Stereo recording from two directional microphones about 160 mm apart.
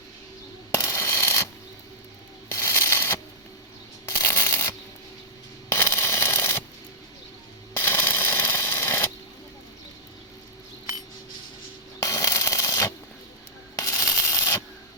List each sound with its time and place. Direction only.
0.8 s coin: 15° left (ahead or behind)
2.5 s a sound: 15° left (ahead or behind)
4.0 s shuffling cards: 15° left (ahead or behind)
5.6 s a sound: 15° left (ahead or behind)
7.8 s coin: 15° left (ahead or behind)
12.0 s sanding: 20° left (ahead or behind)